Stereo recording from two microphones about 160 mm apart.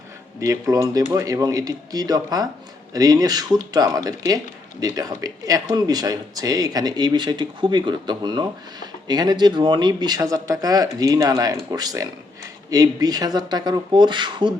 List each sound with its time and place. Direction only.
0.3 s speech: 20° right (ahead or behind)